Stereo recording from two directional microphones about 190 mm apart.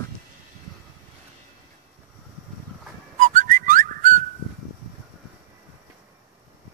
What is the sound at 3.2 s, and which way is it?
Whistling, 40° right (ahead or behind).